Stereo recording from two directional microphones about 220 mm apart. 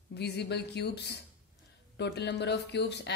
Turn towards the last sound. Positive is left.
turn(degrees=50)  # may be behind; listen again after turning